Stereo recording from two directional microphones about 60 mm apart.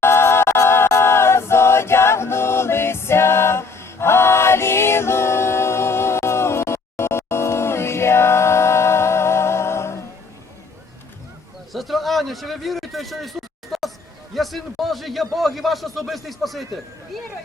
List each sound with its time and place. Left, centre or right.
0.0 s a capella: left
11.7 s a sound: centre
14.3 s a man's voice: centre